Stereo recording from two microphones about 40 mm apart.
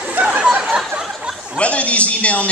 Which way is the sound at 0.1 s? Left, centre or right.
Right.